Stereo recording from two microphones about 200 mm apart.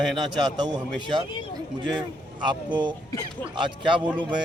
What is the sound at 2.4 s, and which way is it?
Speech, 20° right (ahead or behind).